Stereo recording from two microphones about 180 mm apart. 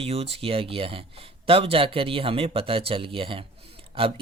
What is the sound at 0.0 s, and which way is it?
A man's voice, 35° right (ahead or behind).